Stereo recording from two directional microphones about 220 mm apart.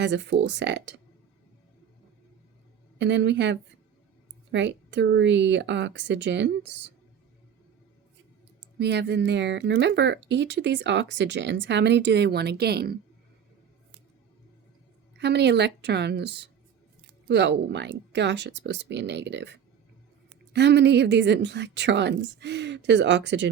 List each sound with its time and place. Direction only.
0.0 s speech: 55° right (ahead or behind)
3.0 s speech: 55° right (ahead or behind)
8.8 s speech: 50° right (ahead or behind)
15.2 s speech: 50° right (ahead or behind)